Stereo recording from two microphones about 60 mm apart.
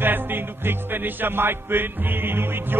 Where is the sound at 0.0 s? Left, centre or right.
Right.